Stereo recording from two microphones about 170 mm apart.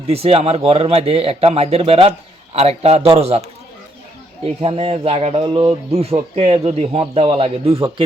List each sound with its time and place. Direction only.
0.1 s speech: 35° right (ahead or behind)
4.6 s speech: 35° right (ahead or behind)